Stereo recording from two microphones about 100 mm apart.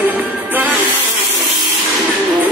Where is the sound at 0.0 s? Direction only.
20° right (ahead or behind).